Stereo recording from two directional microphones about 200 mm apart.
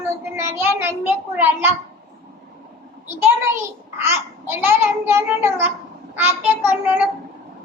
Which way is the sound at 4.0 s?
10° right (ahead or behind).